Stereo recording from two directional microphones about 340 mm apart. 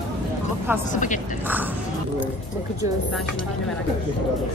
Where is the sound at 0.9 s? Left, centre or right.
Left.